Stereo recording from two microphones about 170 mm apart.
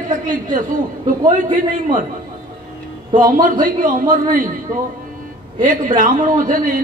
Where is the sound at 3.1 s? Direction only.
25° right (ahead or behind).